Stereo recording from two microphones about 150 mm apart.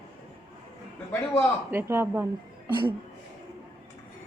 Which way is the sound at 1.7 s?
15° right (ahead or behind).